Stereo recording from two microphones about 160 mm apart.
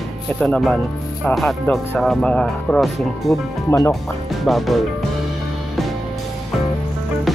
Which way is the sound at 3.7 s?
20° left (ahead or behind).